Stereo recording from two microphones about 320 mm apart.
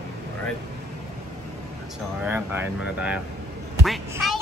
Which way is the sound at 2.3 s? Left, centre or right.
Centre.